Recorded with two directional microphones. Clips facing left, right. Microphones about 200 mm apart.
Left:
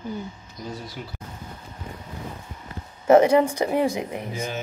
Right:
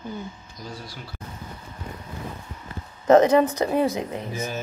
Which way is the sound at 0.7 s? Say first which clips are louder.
Left 3 dB; 20° left (ahead or behind).